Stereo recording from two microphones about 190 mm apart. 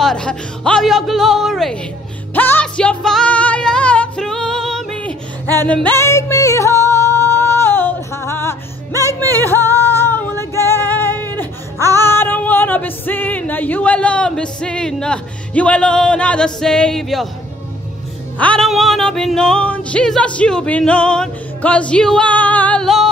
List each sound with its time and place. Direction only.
0.0 s music: 5° left (ahead or behind)
5.6 s singing: 10° left (ahead or behind)
9.6 s female singing: 15° left (ahead or behind)
11.9 s music: 10° left (ahead or behind)
18.4 s music: 5° left (ahead or behind)